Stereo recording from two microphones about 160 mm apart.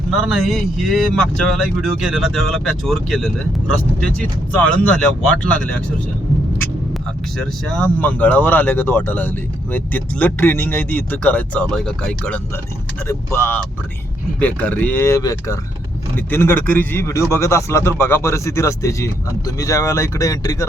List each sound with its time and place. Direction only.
0.1 s speech: 5° right (ahead or behind)
7.3 s speech: 5° left (ahead or behind)
13.1 s speech: 15° left (ahead or behind)